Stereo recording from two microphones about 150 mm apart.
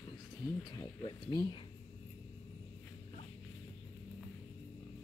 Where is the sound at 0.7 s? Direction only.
30° left (ahead or behind).